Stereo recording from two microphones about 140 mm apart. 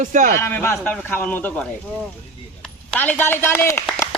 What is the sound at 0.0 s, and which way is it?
Speech, 65° right (ahead or behind).